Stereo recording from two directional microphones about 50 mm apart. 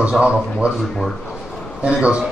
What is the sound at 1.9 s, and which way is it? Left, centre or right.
Speech, right.